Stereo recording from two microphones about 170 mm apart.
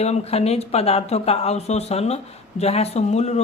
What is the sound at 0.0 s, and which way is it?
Speech, 40° left (ahead or behind).